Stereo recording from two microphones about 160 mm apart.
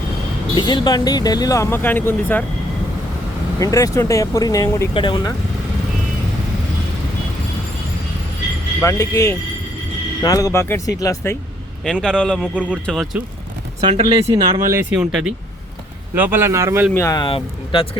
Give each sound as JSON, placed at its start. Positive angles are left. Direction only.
{"t": 0.5, "sound": "speech", "side_deg": 30}
{"t": 3.6, "sound": "speech", "side_deg": 20}
{"t": 8.8, "sound": "speech", "side_deg": 20}
{"t": 11.9, "sound": "a man's voice", "side_deg": 5}
{"t": 13.8, "sound": "speech", "side_deg": -35}
{"t": 14.7, "sound": "speech", "side_deg": -15}
{"t": 16.9, "sound": "speech", "side_deg": 20}
{"t": 17.2, "sound": "speech", "side_deg": 35}